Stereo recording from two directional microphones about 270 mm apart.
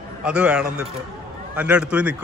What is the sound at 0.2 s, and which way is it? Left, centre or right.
A man's voice, centre.